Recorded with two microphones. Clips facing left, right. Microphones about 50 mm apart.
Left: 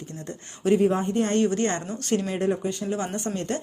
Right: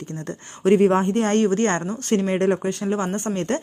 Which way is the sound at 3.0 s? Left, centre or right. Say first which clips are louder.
Right 4 dB; right.